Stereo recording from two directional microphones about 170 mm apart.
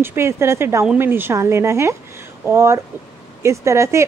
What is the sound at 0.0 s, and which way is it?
Speech, 15° right (ahead or behind).